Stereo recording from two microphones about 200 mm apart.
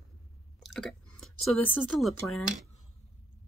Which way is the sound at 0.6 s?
Centre (ahead or behind).